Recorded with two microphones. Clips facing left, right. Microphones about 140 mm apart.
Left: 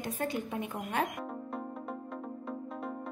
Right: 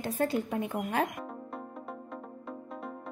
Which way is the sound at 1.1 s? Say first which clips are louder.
Left 2 dB; centre (ahead or behind).